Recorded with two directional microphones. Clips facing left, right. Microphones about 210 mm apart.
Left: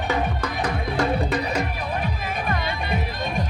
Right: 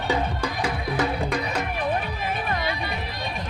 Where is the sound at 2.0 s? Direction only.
45° left (ahead or behind).